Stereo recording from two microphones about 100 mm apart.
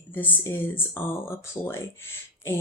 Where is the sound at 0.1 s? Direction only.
20° left (ahead or behind).